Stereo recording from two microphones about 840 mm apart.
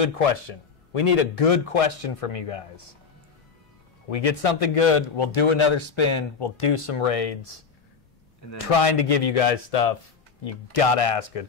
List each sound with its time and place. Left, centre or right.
0.0 s a man's voice: left
4.1 s a man's voice: left
8.7 s a man's voice: left